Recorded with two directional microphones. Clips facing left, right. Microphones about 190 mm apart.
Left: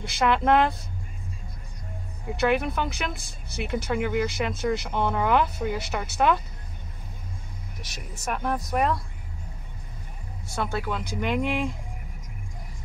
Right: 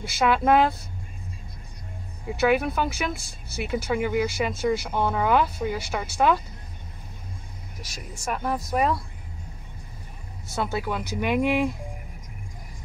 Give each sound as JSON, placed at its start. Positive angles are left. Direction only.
{"t": 0.0, "sound": "speech", "side_deg": -5}
{"t": 2.2, "sound": "speech", "side_deg": -5}
{"t": 7.8, "sound": "speech", "side_deg": 20}
{"t": 8.2, "sound": "speech", "side_deg": 0}
{"t": 10.5, "sound": "speech", "side_deg": -5}